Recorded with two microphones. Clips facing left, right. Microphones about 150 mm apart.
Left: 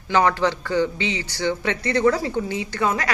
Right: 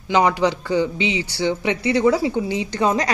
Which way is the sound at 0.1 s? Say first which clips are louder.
Right 2 dB; 15° right (ahead or behind).